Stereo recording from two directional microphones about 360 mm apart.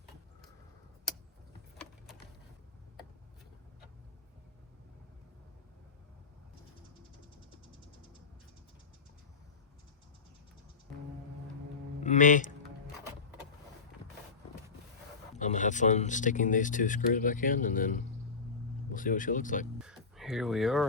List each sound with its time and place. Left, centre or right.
12.0 s speech: left
15.4 s speech: left
19.8 s speech: centre